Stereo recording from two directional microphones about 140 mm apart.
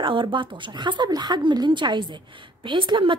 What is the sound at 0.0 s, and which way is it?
A woman's voice, 35° right (ahead or behind).